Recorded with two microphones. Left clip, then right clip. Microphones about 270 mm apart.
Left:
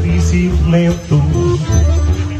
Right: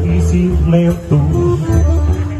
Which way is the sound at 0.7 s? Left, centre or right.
Right.